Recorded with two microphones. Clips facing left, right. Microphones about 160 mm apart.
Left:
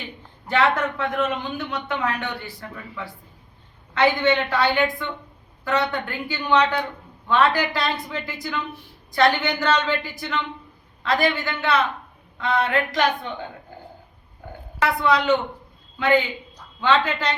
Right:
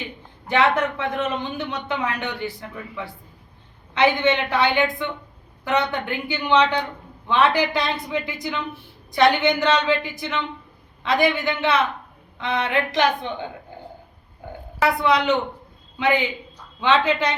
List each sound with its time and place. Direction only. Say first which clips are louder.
0.4 s a man's voice: right 1 dB; 20° right (ahead or behind)
9.1 s a man's voice: right 2 dB; 20° right (ahead or behind)
14.8 s a man's voice: right 1 dB; 15° right (ahead or behind)